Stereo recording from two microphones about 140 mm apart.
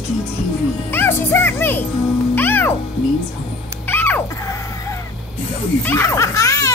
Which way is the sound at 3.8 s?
15° left (ahead or behind).